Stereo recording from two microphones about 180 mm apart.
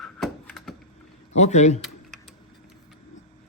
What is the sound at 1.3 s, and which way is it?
Speech, 40° left (ahead or behind).